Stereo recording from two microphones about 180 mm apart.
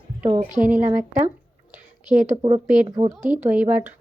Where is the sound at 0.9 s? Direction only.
40° right (ahead or behind).